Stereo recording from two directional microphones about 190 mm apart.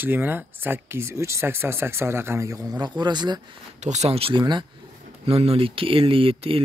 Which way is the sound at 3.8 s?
35° right (ahead or behind).